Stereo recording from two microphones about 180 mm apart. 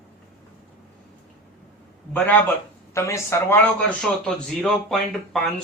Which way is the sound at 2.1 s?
10° left (ahead or behind).